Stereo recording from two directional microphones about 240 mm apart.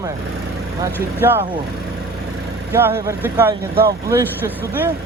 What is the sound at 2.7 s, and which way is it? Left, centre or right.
Speech, centre.